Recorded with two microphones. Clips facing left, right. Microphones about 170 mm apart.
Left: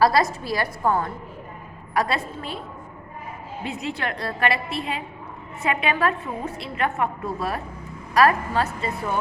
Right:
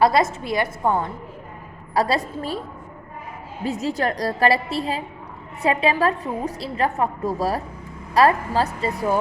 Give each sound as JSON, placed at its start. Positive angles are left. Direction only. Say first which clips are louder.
{"t": 0.0, "sound": "a woman's voice", "louder": "right 1 dB", "side_deg": -25}
{"t": 1.9, "sound": "a woman's voice", "louder": "right 3 dB", "side_deg": -35}
{"t": 3.6, "sound": "a woman's voice", "louder": "right 6 dB", "side_deg": -40}